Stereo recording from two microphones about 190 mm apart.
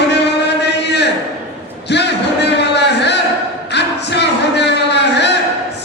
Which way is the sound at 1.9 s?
65° left (ahead or behind).